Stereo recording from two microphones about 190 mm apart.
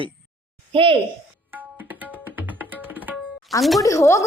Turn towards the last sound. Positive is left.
turn(degrees=15)  # may be behind; listen again after turning